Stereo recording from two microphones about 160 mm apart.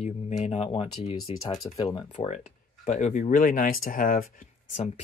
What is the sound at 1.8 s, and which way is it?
Speech, 40° left (ahead or behind).